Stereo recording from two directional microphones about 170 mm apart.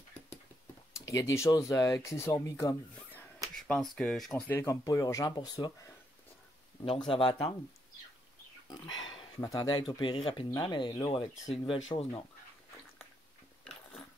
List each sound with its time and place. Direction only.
0.9 s speech: 20° left (ahead or behind)
7.1 s speech: 30° left (ahead or behind)
9.4 s speech: 20° left (ahead or behind)
11.1 s speech: 35° left (ahead or behind)